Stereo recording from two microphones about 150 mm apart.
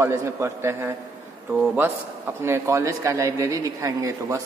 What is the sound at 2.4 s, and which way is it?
A man's voice, 20° right (ahead or behind).